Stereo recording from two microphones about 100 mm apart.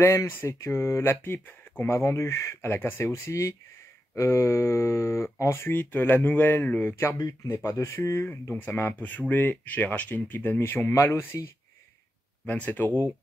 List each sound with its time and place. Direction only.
0.0 s speech: 30° left (ahead or behind)
1.9 s speech: 30° left (ahead or behind)
12.4 s speech: 15° left (ahead or behind)